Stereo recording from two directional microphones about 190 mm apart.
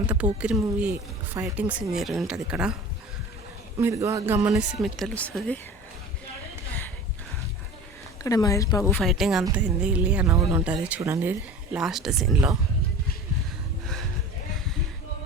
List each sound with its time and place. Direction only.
0.3 s a woman's voice: 5° right (ahead or behind)
3.8 s speech: 15° right (ahead or behind); by 5.5 s 5° left (ahead or behind)
8.2 s speech: 20° left (ahead or behind)
9.0 s a woman's voice: centre (ahead or behind)